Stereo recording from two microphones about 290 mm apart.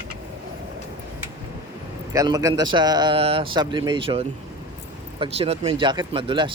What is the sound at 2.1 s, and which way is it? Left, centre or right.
A man's voice, centre.